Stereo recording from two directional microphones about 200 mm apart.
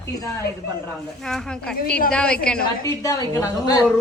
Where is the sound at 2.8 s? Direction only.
15° left (ahead or behind).